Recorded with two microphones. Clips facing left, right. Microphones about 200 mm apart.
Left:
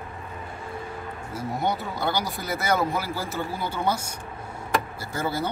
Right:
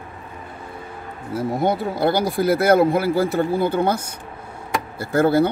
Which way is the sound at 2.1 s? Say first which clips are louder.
Right 10 dB; 55° right (ahead or behind).